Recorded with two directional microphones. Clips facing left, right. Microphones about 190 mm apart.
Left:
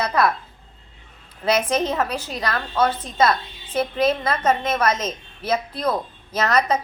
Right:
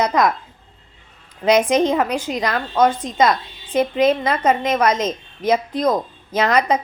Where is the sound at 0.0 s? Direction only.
15° right (ahead or behind).